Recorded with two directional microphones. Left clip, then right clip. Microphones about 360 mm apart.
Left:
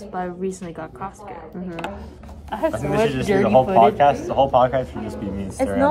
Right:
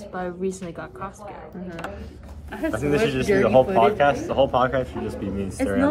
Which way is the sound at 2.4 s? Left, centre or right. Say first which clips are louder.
Left 6 dB; left.